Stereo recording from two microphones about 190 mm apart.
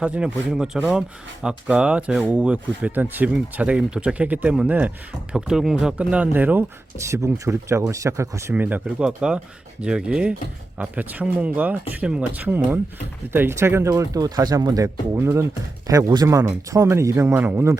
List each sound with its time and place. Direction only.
0.0 s speech: 5° right (ahead or behind)